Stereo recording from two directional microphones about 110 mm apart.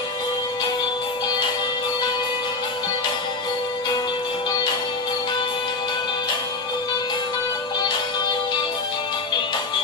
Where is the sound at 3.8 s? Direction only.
40° left (ahead or behind).